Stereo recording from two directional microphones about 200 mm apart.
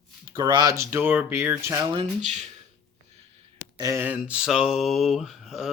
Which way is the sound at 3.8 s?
15° right (ahead or behind).